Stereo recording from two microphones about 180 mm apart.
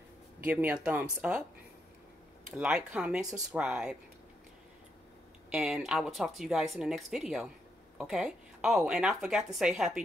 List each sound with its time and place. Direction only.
0.4 s speech: 10° right (ahead or behind)
2.5 s speech: 5° right (ahead or behind)
5.5 s speech: 5° right (ahead or behind)